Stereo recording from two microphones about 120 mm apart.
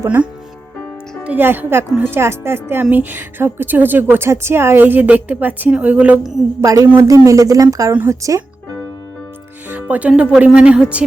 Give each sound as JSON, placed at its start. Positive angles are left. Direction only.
{"t": 1.2, "sound": "a woman's voice", "side_deg": -15}
{"t": 6.6, "sound": "a woman's voice", "side_deg": -25}
{"t": 9.6, "sound": "a woman's voice", "side_deg": -15}